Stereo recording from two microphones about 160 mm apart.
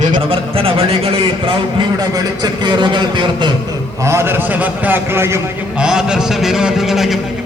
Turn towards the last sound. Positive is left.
turn(degrees=0)  # may be behind; listen again after turning